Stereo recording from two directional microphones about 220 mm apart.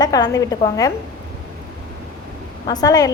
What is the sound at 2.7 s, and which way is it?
Speech, 15° left (ahead or behind).